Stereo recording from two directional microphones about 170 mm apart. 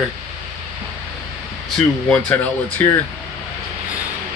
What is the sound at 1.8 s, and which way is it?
Speech, 5° left (ahead or behind).